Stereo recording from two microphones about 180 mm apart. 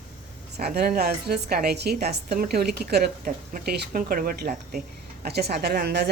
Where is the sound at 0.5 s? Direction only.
60° right (ahead or behind).